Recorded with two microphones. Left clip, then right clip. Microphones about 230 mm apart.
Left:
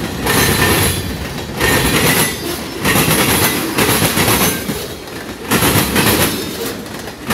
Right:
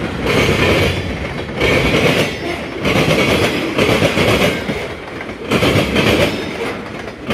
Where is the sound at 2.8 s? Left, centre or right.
Left.